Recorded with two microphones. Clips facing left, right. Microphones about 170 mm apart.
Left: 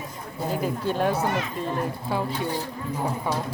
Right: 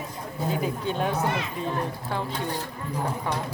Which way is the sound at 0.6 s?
Centre (ahead or behind).